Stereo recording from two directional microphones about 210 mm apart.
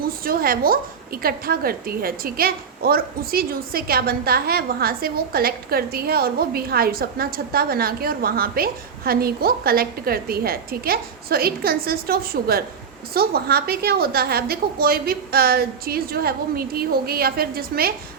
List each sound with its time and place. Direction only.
0.0 s a woman's voice: 45° right (ahead or behind)